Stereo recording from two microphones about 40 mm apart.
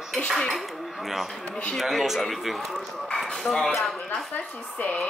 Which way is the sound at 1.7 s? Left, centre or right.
Centre.